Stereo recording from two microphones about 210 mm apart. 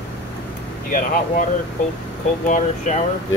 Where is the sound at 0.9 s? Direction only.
40° left (ahead or behind).